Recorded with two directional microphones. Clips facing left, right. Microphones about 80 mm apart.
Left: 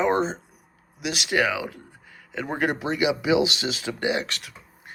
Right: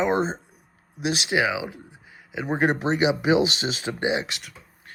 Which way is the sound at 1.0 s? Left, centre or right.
Right.